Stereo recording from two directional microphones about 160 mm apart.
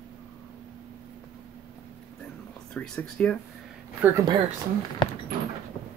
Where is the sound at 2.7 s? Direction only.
5° left (ahead or behind).